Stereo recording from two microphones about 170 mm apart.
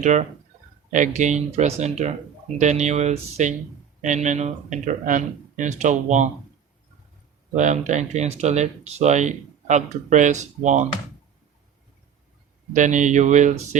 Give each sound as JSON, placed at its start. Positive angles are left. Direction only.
{"t": 0.0, "sound": "speech", "side_deg": -45}
{"t": 7.5, "sound": "speech", "side_deg": -45}
{"t": 12.7, "sound": "speech", "side_deg": -45}